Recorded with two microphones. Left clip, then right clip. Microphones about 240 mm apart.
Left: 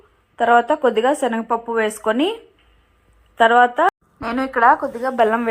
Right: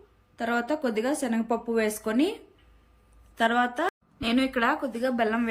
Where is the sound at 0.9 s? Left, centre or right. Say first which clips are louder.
Left 10 dB; left.